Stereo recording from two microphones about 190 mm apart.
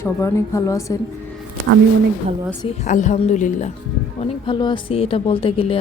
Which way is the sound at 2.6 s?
35° left (ahead or behind).